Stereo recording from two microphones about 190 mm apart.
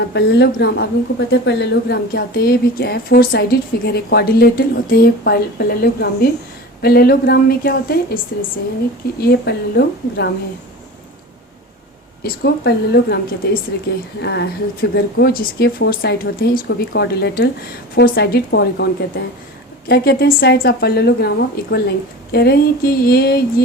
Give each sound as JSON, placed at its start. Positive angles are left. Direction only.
{"t": 0.1, "sound": "speech", "side_deg": 60}
{"t": 12.2, "sound": "speech", "side_deg": 60}